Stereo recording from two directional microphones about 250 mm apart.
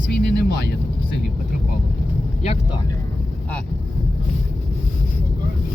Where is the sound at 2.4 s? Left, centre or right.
Left.